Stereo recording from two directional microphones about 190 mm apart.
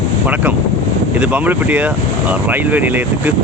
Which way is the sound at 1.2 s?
10° right (ahead or behind).